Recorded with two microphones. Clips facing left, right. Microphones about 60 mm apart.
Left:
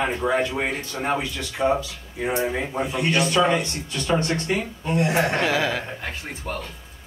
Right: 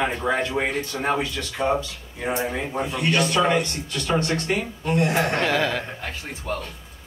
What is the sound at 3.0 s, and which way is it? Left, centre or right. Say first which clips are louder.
Speech: even; left.